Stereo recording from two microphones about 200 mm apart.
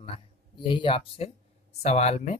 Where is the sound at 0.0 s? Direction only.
25° left (ahead or behind).